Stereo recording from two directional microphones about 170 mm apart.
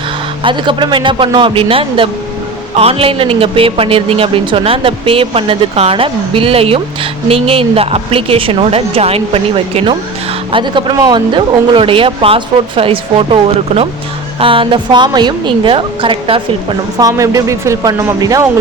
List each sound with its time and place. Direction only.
0.4 s a man's voice: 30° right (ahead or behind)
17.0 s speech: 20° right (ahead or behind)